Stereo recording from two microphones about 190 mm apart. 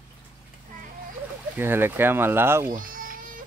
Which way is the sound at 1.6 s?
10° right (ahead or behind).